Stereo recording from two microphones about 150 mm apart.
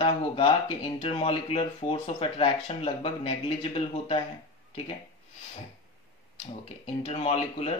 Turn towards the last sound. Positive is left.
turn(degrees=45)  # may be behind; listen again after turning